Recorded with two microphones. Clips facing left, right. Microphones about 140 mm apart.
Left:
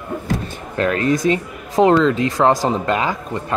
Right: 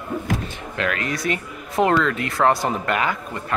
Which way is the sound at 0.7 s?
35° left (ahead or behind).